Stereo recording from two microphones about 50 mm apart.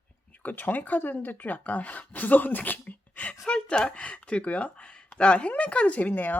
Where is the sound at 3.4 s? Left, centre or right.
Centre.